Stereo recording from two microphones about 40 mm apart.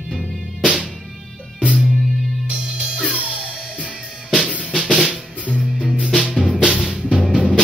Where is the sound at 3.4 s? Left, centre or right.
Centre.